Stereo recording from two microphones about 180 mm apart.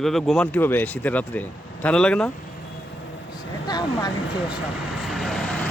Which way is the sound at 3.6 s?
20° left (ahead or behind).